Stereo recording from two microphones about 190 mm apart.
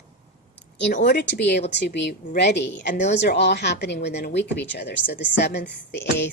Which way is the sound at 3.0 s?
35° left (ahead or behind).